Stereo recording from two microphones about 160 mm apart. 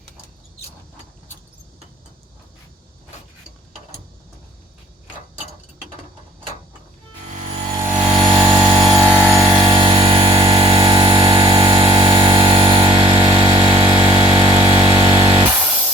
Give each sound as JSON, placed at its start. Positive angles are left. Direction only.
{"t": 7.9, "sound": "vehicle", "side_deg": -25}
{"t": 15.3, "sound": "music", "side_deg": -30}